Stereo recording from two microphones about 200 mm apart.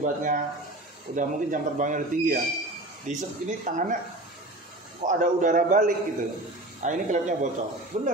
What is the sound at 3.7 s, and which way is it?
Speech, 40° right (ahead or behind).